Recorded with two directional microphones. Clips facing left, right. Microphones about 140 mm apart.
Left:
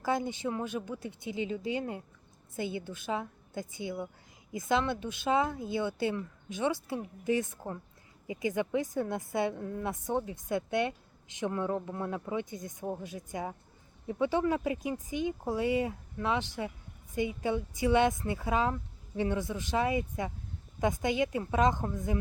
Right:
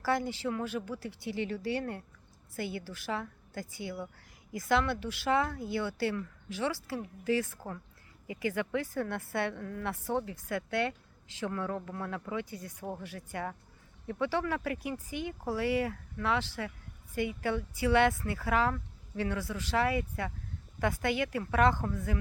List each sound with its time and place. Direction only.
0.0 s a woman's voice: 20° left (ahead or behind)